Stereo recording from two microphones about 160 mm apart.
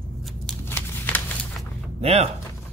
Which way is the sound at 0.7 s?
10° left (ahead or behind).